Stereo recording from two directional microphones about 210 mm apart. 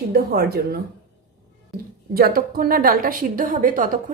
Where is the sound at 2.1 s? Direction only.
45° right (ahead or behind).